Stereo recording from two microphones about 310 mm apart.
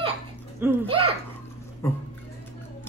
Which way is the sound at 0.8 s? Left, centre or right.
Centre.